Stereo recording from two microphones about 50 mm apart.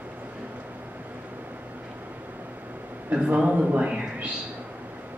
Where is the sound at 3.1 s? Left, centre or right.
Right.